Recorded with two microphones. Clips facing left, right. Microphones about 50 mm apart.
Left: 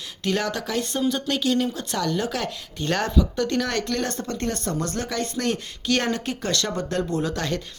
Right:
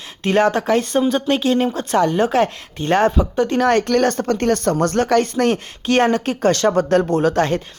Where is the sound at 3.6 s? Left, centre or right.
Right.